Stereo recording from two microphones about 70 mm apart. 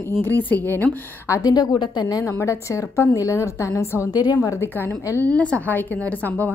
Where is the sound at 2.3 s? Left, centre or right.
Left.